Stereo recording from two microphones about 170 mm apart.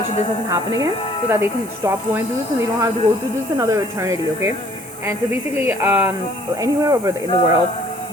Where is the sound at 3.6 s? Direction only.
20° right (ahead or behind).